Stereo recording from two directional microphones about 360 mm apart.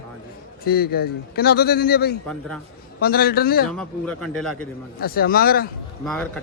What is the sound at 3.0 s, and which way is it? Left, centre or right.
Speech, left.